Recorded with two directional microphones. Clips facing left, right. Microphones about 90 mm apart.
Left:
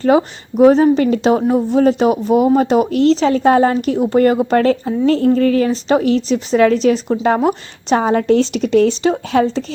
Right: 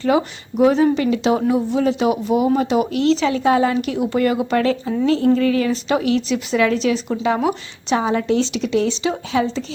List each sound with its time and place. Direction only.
0.0 s speech: 35° left (ahead or behind)